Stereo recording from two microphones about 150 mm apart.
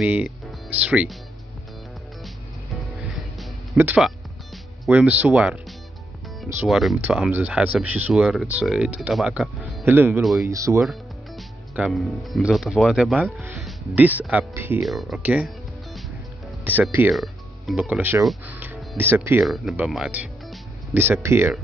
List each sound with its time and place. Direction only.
0.0 s speech: 10° right (ahead or behind)
3.7 s speech: 10° right (ahead or behind)
10.8 s speech: centre (ahead or behind)
14.8 s speech: centre (ahead or behind)
15.2 s music: 5° right (ahead or behind)
16.6 s speech: 10° right (ahead or behind)
17.1 s speech: centre (ahead or behind)
18.5 s music: 10° right (ahead or behind)
18.9 s speech: 15° right (ahead or behind)
19.4 s speech: centre (ahead or behind); by 21.5 s 15° right (ahead or behind)